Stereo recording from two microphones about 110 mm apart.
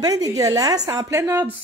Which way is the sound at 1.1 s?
20° right (ahead or behind).